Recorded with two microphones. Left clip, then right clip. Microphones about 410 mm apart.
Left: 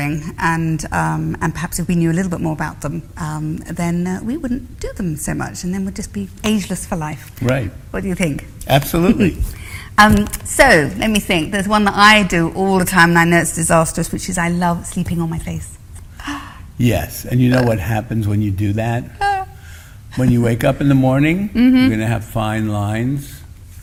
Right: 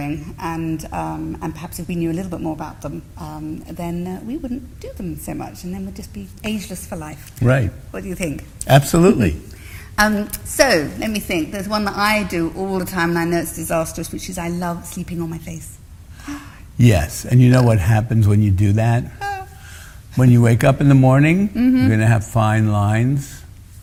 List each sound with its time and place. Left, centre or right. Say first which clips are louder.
0.0 s a woman's voice: left 7 dB; left
7.4 s speech: right 1 dB; right
7.9 s a woman's voice: left 5 dB; left
8.6 s speech: right 2 dB; right
9.7 s a woman's voice: left 6 dB; left
16.7 s speech: right 1 dB; right
19.2 s a sound: left 14 dB; left
20.1 s speech: even; right
21.5 s speech: left 4 dB; left
21.8 s speech: even; right